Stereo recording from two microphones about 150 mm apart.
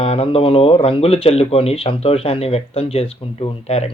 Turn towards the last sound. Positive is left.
turn(degrees=40)  # may be behind; listen again after turning